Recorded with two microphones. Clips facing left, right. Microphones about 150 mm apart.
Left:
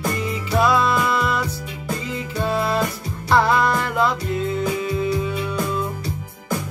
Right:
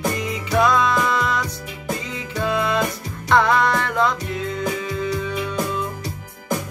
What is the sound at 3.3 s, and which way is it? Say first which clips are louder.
Music: even; 5° left (ahead or behind).